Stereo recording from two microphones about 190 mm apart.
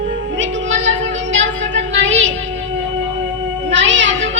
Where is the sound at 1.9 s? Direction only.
75° right (ahead or behind).